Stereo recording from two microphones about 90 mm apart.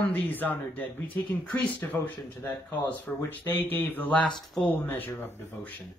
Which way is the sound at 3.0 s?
20° left (ahead or behind).